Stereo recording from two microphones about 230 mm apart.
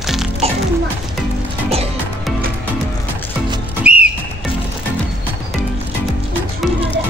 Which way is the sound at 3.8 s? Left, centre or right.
Centre.